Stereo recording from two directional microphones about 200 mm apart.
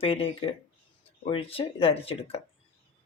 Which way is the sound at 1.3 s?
25° left (ahead or behind).